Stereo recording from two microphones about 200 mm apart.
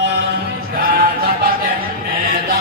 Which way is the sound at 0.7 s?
45° right (ahead or behind).